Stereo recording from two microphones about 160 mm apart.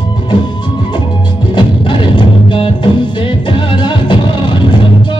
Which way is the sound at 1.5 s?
30° left (ahead or behind).